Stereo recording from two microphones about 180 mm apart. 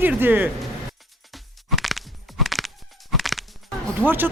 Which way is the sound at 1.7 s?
Centre (ahead or behind).